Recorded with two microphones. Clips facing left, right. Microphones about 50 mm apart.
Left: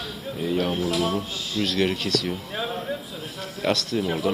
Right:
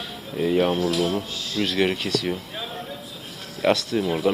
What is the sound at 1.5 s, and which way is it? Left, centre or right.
Speech, centre.